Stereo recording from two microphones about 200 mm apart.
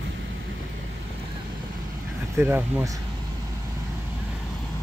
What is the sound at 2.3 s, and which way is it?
Speech, 10° right (ahead or behind).